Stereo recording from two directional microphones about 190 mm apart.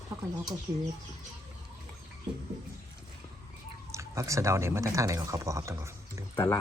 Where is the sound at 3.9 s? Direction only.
15° right (ahead or behind).